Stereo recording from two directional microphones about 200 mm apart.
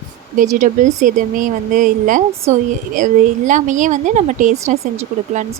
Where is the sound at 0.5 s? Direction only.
40° right (ahead or behind).